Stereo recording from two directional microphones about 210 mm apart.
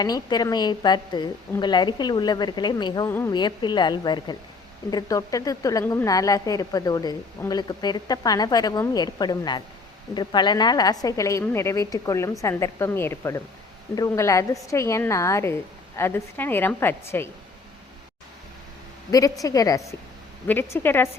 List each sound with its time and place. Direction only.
0.0 s a woman's voice: 20° left (ahead or behind)
19.1 s a woman's voice: 15° left (ahead or behind)